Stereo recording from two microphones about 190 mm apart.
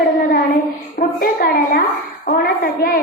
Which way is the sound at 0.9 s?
50° left (ahead or behind).